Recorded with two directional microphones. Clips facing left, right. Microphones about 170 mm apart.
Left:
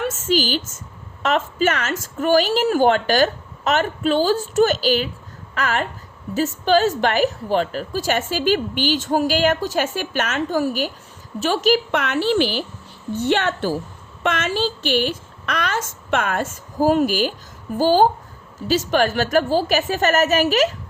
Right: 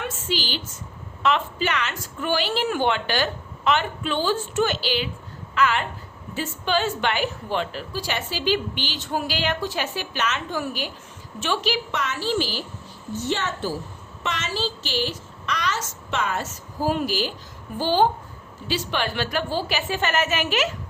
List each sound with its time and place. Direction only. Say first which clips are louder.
0.0 s a sound: left 8 dB; 45° left (ahead or behind)
1.2 s a woman's voice: left 4 dB; 45° left (ahead or behind); by 13.7 s 65° left (ahead or behind)
14.3 s a woman's voice: left 6 dB; 55° left (ahead or behind)